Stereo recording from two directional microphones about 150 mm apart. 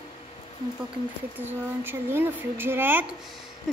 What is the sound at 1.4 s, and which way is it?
Speech, 15° right (ahead or behind).